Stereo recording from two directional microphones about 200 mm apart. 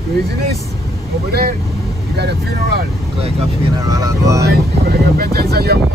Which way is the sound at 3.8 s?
15° right (ahead or behind).